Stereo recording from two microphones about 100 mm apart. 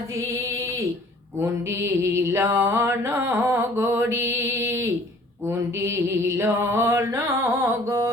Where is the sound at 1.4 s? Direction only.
25° right (ahead or behind).